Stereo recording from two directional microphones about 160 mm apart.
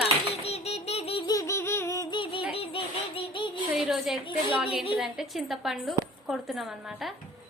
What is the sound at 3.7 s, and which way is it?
A woman's voice, centre (ahead or behind).